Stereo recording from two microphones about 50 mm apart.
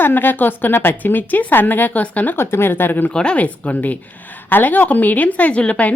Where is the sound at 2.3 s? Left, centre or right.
Left.